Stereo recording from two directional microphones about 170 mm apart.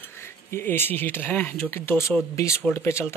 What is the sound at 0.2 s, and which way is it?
Speech, 15° left (ahead or behind).